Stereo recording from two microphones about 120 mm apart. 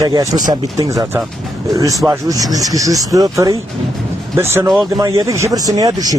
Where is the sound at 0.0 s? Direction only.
30° right (ahead or behind).